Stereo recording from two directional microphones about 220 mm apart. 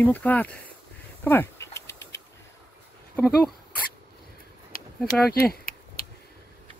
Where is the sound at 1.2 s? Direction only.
10° left (ahead or behind).